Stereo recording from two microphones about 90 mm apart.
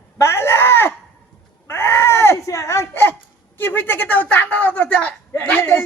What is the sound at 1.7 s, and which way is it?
Wail, 25° left (ahead or behind).